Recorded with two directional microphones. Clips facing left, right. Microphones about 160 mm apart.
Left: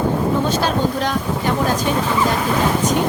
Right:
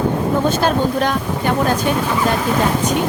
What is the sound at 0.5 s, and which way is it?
A woman's voice, 55° right (ahead or behind).